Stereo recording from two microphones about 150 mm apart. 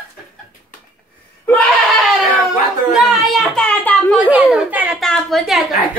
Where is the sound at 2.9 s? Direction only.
Centre (ahead or behind).